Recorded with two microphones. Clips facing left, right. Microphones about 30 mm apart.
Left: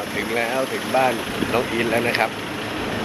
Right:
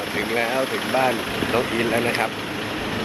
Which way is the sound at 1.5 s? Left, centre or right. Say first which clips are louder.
Left 1 dB; centre.